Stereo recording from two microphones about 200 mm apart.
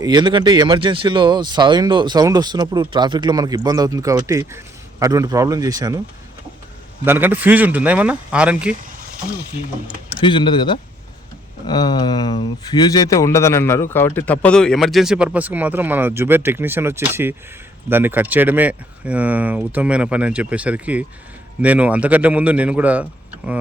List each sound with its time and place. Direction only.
0.0 s speech: 20° right (ahead or behind)
7.0 s speech: 10° right (ahead or behind)
10.2 s speech: 25° left (ahead or behind); by 23.0 s 5° right (ahead or behind)